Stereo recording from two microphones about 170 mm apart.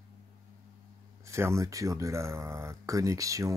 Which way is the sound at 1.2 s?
15° right (ahead or behind).